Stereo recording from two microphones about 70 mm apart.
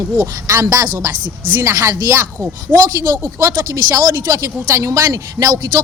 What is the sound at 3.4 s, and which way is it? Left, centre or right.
Speech, right.